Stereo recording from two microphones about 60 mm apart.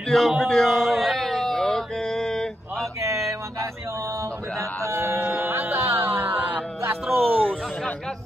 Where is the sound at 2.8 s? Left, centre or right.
Right.